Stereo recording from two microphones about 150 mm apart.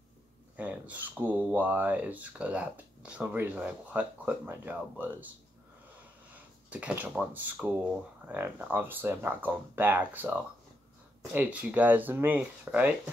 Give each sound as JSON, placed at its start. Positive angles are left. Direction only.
{"t": 0.6, "sound": "speech", "side_deg": -10}
{"t": 6.3, "sound": "speech", "side_deg": -10}